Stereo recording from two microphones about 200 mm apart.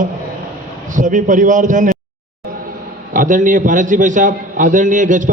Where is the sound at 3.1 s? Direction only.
40° right (ahead or behind).